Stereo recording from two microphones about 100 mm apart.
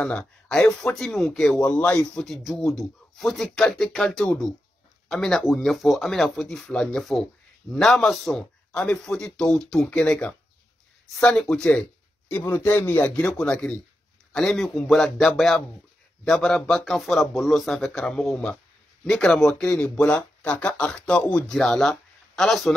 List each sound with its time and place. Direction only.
0.2 s speech: 5° left (ahead or behind)
1.6 s speech: 15° left (ahead or behind)
12.3 s speech: 20° left (ahead or behind); by 22.8 s 5° left (ahead or behind)